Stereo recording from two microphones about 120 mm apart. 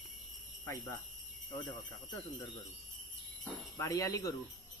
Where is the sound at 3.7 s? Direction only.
25° left (ahead or behind).